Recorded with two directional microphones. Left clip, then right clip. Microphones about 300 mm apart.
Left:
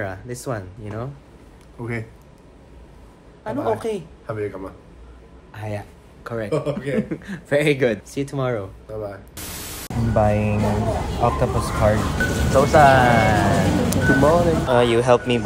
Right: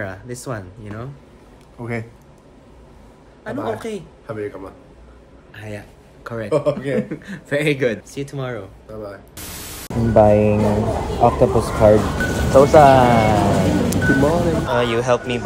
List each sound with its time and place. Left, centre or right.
0.0 s a woman's voice: centre
3.4 s a woman's voice: centre
5.5 s a man's voice: centre
6.2 s speech: centre
6.5 s speech: centre
7.0 s a woman's voice: centre
8.1 s speech: centre
9.3 s speech: centre